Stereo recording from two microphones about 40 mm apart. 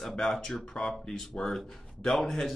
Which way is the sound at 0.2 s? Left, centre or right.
Centre.